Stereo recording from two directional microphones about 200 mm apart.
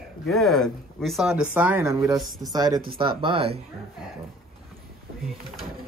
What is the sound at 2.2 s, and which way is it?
Speech, centre (ahead or behind).